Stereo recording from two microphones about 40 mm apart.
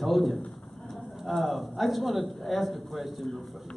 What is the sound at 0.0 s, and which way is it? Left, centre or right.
A man's voice, centre.